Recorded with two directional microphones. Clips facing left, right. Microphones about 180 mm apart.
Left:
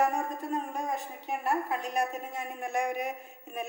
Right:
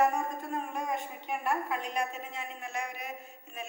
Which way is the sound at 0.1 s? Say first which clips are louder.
Left 2 dB; 35° left (ahead or behind).